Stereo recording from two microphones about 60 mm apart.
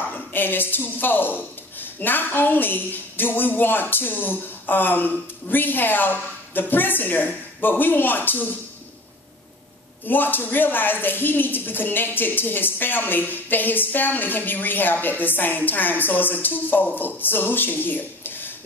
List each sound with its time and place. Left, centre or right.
0.1 s a woman's voice: left
10.0 s a woman's voice: left